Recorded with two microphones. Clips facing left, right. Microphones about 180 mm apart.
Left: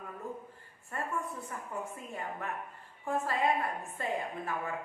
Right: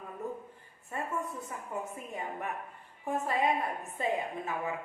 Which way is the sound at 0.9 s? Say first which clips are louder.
Right 1 dB; 20° right (ahead or behind).